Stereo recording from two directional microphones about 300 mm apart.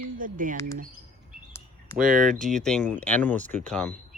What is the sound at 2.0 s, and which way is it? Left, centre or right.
Speech, right.